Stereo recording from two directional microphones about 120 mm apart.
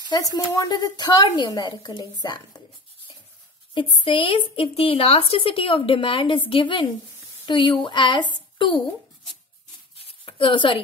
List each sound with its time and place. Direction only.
0.1 s a woman's voice: 30° left (ahead or behind)
3.7 s a woman's voice: 45° left (ahead or behind)
9.9 s a sound: 50° left (ahead or behind)